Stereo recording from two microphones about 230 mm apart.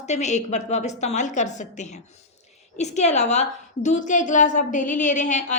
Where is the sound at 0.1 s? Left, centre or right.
Left.